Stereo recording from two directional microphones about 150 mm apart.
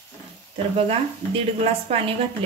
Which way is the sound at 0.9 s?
40° right (ahead or behind).